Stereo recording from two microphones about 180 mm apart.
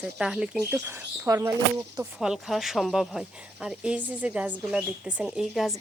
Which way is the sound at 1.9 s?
5° right (ahead or behind).